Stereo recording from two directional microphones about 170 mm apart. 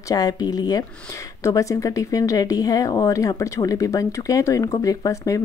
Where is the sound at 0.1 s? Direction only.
20° left (ahead or behind).